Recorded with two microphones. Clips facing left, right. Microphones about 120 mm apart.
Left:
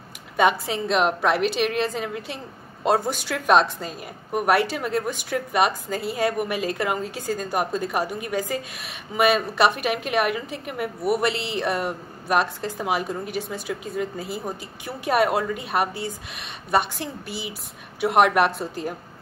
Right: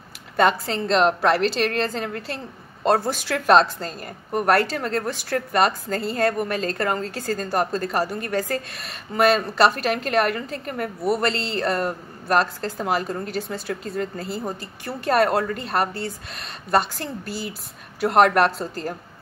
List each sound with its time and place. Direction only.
0.4 s a woman's voice: 5° left (ahead or behind)